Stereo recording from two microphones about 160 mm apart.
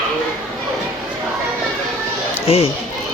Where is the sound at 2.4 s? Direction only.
40° left (ahead or behind).